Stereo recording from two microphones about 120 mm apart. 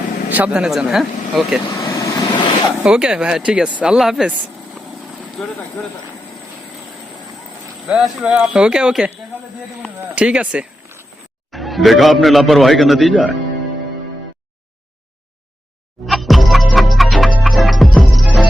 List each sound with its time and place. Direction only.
0.3 s a man's voice: 15° right (ahead or behind)
1.7 s vehicle: 35° left (ahead or behind)
2.8 s speech: 5° right (ahead or behind)
5.4 s a man's voice: 5° left (ahead or behind)
7.9 s speech: 5° right (ahead or behind)
10.2 s a man's voice: 10° right (ahead or behind)
16.0 s music: centre (ahead or behind)